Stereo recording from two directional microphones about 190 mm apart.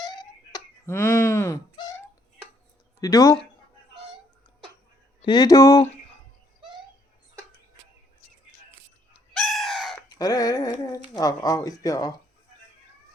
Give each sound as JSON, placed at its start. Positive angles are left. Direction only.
{"t": 0.0, "sound": "a sound", "side_deg": 20}
{"t": 3.0, "sound": "speech", "side_deg": 20}
{"t": 5.2, "sound": "speech", "side_deg": 25}
{"t": 9.3, "sound": "chicken", "side_deg": 0}
{"t": 10.2, "sound": "a sound", "side_deg": 20}
{"t": 11.2, "sound": "speech", "side_deg": 20}